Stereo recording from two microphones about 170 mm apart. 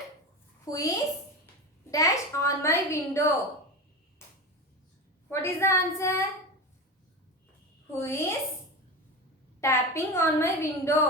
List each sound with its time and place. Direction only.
0.6 s a child's voice: 20° left (ahead or behind)
5.3 s a woman's voice: 15° left (ahead or behind)
7.9 s a woman's voice: 15° left (ahead or behind)
9.6 s a woman's voice: 15° left (ahead or behind)